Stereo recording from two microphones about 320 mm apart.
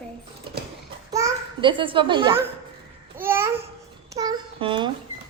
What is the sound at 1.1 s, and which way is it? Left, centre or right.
Babbling, centre.